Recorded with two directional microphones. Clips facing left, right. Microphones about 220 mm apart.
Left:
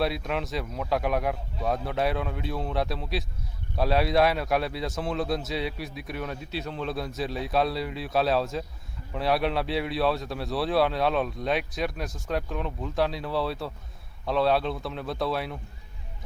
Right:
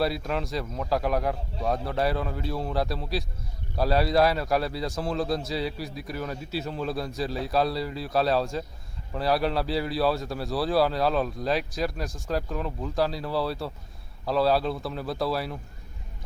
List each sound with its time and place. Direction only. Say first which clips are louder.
0.0 s a man's voice: right 1 dB; centre (ahead or behind)